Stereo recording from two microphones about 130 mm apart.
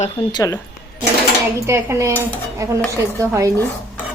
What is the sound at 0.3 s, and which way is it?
Speech, 30° left (ahead or behind).